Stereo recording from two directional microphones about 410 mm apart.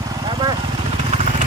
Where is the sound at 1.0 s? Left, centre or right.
Centre.